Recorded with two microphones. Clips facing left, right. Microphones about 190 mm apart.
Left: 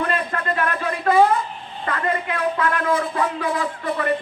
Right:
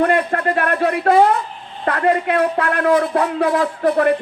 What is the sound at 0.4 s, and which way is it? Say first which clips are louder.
A man's voice: right 6 dB; 65° right (ahead or behind).